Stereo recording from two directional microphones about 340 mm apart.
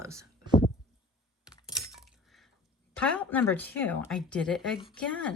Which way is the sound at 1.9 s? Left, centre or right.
Centre.